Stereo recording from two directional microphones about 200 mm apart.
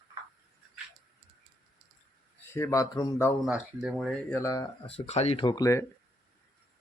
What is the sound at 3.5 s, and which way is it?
Speech, 5° right (ahead or behind).